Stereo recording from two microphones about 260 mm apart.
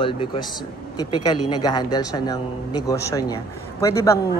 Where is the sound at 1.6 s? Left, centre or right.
Centre.